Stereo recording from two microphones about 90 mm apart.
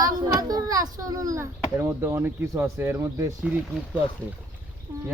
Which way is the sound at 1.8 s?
25° right (ahead or behind).